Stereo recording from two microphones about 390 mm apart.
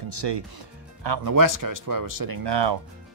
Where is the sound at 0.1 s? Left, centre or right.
Right.